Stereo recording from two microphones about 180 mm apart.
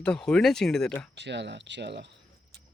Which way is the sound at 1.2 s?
75° right (ahead or behind).